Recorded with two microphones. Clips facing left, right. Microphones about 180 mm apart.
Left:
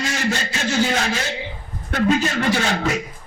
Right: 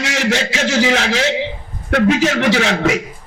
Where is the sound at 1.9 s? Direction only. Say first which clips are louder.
Right 5 dB; 75° right (ahead or behind).